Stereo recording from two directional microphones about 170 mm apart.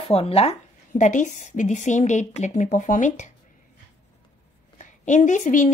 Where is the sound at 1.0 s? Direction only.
45° left (ahead or behind).